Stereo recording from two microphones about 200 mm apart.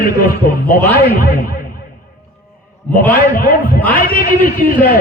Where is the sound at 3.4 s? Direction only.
45° left (ahead or behind).